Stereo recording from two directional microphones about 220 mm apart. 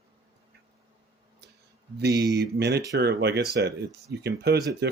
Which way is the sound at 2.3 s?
50° right (ahead or behind).